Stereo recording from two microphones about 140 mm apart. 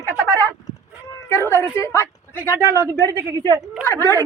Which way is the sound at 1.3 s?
15° left (ahead or behind).